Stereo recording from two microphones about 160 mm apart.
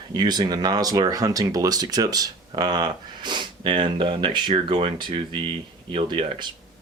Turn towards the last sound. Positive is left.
turn(degrees=-30)  # may be behind; listen again after turning